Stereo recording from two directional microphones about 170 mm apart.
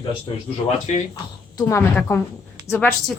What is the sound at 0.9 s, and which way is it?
Speech, 45° left (ahead or behind).